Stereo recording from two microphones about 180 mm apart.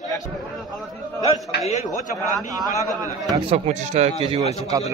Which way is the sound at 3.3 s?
30° right (ahead or behind).